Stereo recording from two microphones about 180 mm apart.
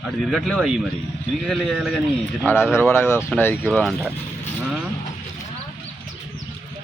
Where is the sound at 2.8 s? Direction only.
15° left (ahead or behind).